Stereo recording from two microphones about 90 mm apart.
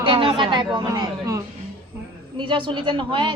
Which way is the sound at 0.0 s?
85° right.